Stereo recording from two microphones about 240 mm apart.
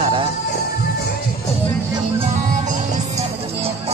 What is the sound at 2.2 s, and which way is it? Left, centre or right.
Music, right.